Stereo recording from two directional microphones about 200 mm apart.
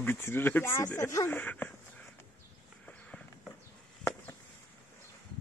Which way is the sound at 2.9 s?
5° left (ahead or behind).